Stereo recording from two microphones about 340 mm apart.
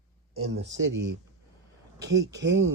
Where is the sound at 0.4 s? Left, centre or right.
Right.